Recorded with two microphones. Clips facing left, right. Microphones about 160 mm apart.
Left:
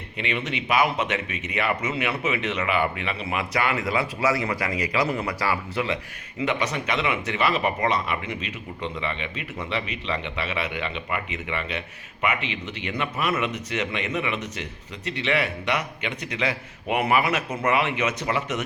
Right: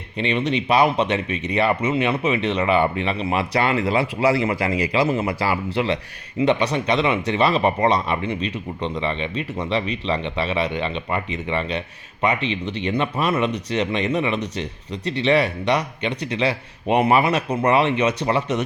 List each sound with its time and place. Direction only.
0.2 s speech: 30° right (ahead or behind)